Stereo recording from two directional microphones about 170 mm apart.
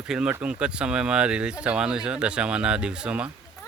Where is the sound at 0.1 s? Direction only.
5° right (ahead or behind).